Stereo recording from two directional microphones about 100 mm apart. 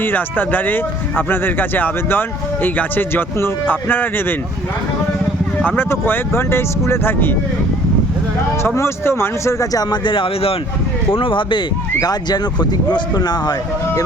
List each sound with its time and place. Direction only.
0.0 s speech: 20° left (ahead or behind)
5.6 s speech: 20° left (ahead or behind)
8.6 s speech: 25° left (ahead or behind)
9.9 s speech: 55° left (ahead or behind)
11.9 s speech: 40° left (ahead or behind)